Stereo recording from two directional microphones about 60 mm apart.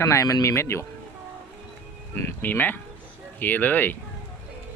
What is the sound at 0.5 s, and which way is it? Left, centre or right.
Speech, left.